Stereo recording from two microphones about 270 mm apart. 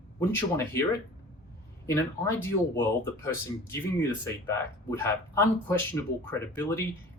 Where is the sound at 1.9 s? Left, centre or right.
Centre.